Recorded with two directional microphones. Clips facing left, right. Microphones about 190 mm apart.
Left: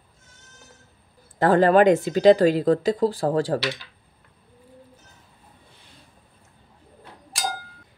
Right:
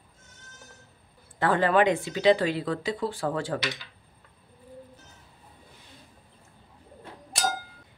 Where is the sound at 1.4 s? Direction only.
40° left (ahead or behind).